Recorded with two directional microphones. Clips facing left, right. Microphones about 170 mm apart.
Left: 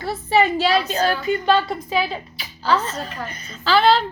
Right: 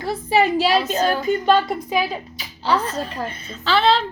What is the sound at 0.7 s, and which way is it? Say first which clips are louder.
Speech: right 1 dB; 45° right (ahead or behind).